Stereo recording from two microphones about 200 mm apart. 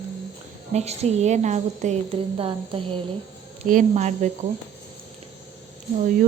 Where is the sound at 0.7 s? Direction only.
35° right (ahead or behind).